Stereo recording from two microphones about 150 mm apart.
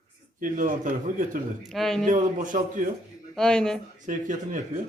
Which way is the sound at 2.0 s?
60° right (ahead or behind).